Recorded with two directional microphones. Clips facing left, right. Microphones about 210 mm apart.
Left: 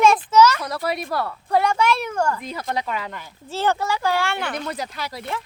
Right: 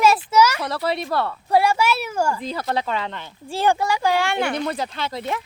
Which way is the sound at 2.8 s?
30° right (ahead or behind).